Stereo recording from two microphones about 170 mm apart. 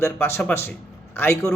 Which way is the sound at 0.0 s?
15° left (ahead or behind).